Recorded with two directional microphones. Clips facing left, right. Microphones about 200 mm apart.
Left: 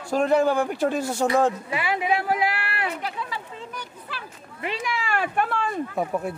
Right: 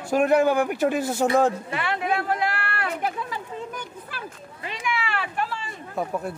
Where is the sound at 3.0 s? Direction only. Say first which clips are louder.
Right 3 dB; 50° right (ahead or behind).